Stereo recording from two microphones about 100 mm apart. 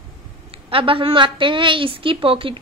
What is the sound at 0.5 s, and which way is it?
A woman's voice, 65° right (ahead or behind).